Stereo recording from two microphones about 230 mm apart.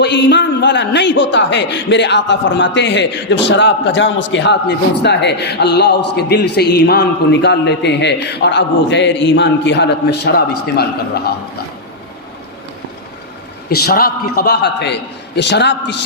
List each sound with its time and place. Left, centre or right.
0.0 s a man's voice: left
13.7 s a man's voice: left